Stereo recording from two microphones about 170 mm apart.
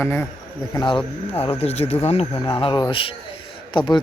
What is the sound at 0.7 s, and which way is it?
Speech, 25° left (ahead or behind).